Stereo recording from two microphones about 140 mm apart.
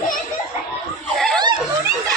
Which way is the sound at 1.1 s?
Centre (ahead or behind).